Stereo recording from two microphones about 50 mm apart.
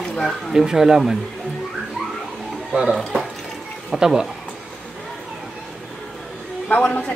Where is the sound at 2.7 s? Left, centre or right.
Centre.